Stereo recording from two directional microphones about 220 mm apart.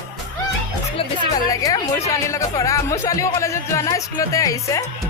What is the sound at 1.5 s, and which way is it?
Speech, 15° left (ahead or behind).